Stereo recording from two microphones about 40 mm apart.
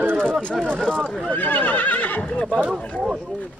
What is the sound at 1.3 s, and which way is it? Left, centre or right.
Neigh, left.